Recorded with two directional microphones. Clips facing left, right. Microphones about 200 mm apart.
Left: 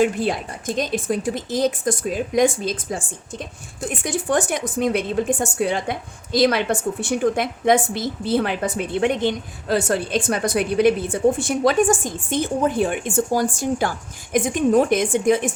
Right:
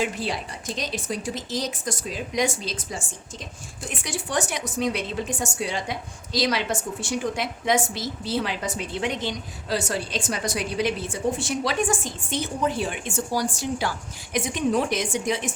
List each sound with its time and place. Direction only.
0.0 s speech: 50° left (ahead or behind)